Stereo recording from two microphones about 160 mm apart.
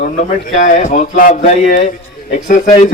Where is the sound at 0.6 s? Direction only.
50° left (ahead or behind).